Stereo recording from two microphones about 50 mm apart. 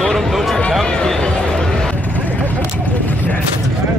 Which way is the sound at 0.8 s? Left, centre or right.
Centre.